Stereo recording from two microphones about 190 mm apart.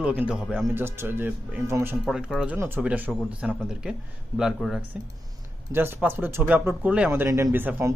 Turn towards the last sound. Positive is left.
turn(degrees=-10)  # may be behind; listen again after turning